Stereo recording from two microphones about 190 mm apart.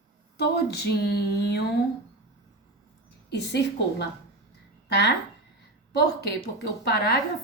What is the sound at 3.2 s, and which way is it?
A woman's voice, 60° left (ahead or behind).